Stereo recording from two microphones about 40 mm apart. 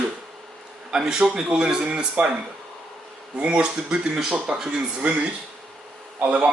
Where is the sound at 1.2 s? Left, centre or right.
Right.